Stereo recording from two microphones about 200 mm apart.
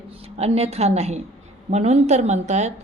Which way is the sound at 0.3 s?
30° right (ahead or behind).